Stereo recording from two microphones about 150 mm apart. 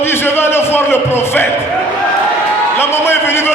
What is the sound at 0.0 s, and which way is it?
Music, 15° left (ahead or behind).